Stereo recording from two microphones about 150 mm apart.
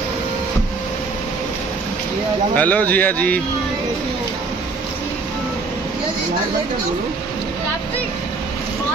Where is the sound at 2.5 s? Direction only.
10° left (ahead or behind).